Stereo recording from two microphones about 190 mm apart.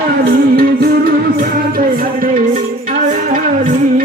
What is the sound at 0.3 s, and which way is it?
Music, 50° right (ahead or behind).